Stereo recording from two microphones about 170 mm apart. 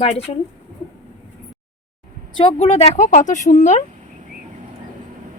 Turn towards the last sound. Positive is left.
turn(degrees=45)  # may be behind; listen again after turning